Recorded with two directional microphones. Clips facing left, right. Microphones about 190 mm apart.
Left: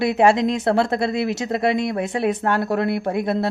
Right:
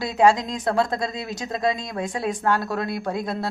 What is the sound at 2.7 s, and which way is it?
Speech, 60° left (ahead or behind).